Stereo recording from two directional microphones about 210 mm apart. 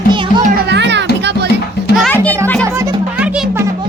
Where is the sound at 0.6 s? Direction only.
55° right (ahead or behind).